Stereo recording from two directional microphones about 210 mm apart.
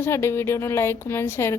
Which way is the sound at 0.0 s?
10° left (ahead or behind).